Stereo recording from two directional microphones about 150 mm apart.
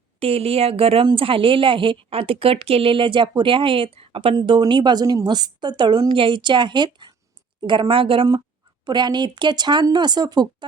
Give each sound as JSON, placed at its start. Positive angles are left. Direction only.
{"t": 0.2, "sound": "a woman's voice", "side_deg": -40}